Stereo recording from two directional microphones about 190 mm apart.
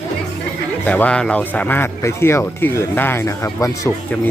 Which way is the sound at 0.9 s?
5° left (ahead or behind).